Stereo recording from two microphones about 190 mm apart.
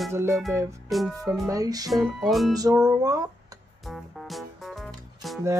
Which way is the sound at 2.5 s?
20° right (ahead or behind).